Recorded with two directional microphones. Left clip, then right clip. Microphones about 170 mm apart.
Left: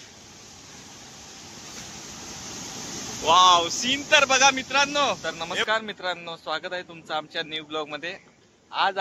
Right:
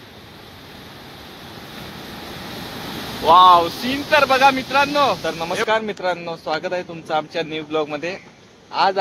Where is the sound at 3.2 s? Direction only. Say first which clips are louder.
Right 6 dB; centre (ahead or behind).